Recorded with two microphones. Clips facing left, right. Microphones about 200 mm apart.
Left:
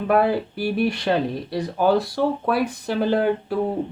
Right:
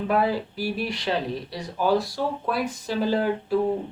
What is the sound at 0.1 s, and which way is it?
Speech, 60° left (ahead or behind).